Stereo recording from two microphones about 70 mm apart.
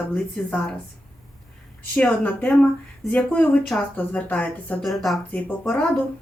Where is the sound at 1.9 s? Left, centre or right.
Centre.